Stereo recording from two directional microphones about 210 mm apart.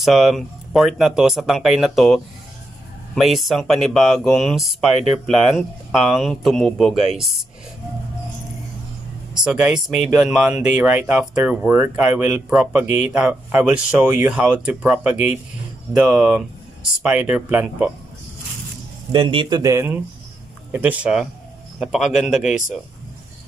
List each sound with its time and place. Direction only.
0.0 s speech: centre (ahead or behind)
9.4 s speech: 5° right (ahead or behind)
19.1 s speech: 25° right (ahead or behind); by 22.6 s centre (ahead or behind)